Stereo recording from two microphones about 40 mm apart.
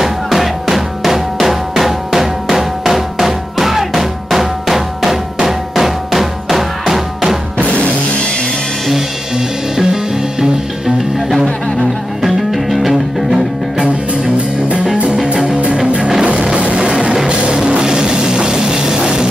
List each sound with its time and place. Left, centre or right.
0.0 s music: centre
7.5 s music: left
11.8 s music: centre
14.2 s music: right